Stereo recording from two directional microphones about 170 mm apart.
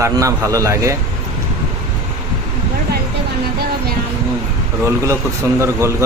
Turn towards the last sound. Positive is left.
turn(degrees=-15)  # may be behind; listen again after turning